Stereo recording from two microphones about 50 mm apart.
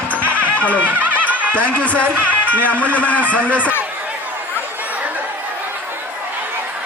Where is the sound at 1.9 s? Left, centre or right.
Right.